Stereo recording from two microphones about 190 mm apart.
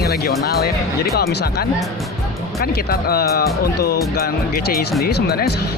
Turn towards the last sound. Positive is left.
turn(degrees=55)  # may be behind; listen again after turning